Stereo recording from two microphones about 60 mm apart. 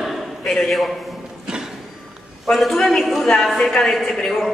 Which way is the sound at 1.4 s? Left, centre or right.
Centre.